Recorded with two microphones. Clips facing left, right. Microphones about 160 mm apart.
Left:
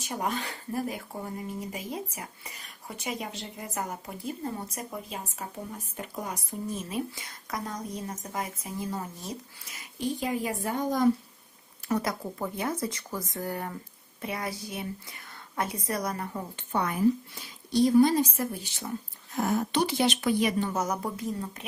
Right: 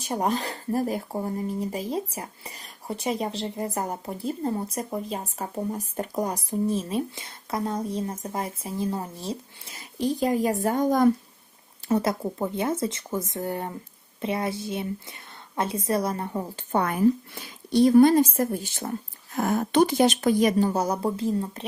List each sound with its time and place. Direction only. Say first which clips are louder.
0.0 s speech: right 6 dB; 35° right (ahead or behind)
11.9 s speech: right 5 dB; 25° right (ahead or behind)
16.7 s a woman's voice: right 4 dB; 55° right (ahead or behind); by 21.7 s 30° right (ahead or behind)